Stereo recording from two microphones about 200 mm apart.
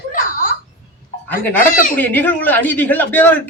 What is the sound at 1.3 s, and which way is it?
Speech, 10° left (ahead or behind).